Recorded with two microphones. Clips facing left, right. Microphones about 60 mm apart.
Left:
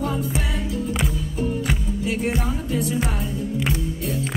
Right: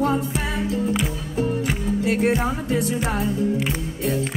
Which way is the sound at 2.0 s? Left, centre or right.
Right.